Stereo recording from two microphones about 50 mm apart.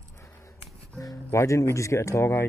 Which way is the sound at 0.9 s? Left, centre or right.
Left.